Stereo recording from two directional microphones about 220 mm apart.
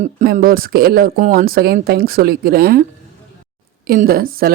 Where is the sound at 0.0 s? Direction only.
40° right (ahead or behind).